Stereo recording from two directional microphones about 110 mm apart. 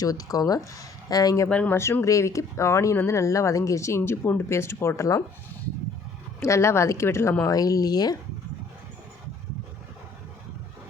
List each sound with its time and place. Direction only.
0.0 s speech: 35° left (ahead or behind)
1.5 s speech: 10° left (ahead or behind)
1.7 s speech: 25° left (ahead or behind)
6.4 s speech: 25° left (ahead or behind)